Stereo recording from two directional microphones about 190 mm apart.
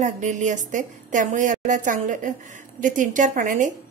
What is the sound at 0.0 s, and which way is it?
A woman's voice, 40° right (ahead or behind).